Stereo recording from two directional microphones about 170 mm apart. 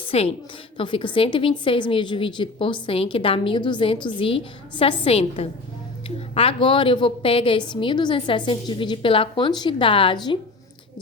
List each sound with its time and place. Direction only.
0.1 s a woman's voice: 35° left (ahead or behind)